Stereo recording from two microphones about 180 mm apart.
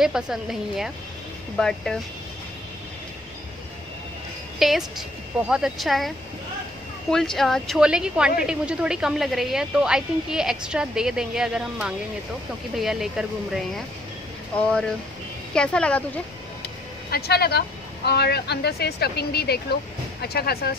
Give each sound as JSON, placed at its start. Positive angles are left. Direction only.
{"t": 0.0, "sound": "a woman's voice", "side_deg": 0}
{"t": 4.6, "sound": "a woman's voice", "side_deg": 0}
{"t": 15.5, "sound": "a woman's voice", "side_deg": 5}
{"t": 16.6, "sound": "speech", "side_deg": 60}